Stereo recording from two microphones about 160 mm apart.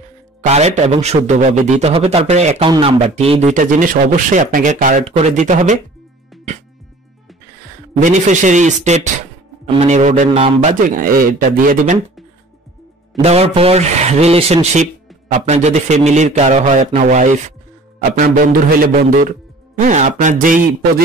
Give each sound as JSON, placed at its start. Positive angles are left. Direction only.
{"t": 0.5, "sound": "speech", "side_deg": -45}
{"t": 6.3, "sound": "music", "side_deg": 0}
{"t": 8.0, "sound": "speech", "side_deg": -50}
{"t": 13.2, "sound": "a man's voice", "side_deg": -40}